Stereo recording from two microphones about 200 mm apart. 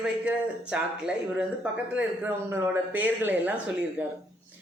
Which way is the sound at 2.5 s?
10° right (ahead or behind).